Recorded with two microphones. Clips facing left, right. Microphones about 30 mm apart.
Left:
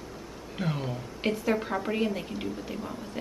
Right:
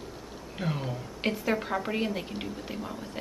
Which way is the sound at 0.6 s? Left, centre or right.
Centre.